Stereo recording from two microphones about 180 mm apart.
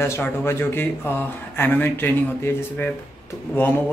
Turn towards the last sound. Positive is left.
turn(degrees=10)  # may be behind; listen again after turning